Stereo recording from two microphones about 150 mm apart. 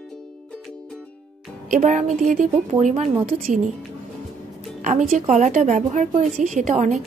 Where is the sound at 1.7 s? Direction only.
55° right (ahead or behind).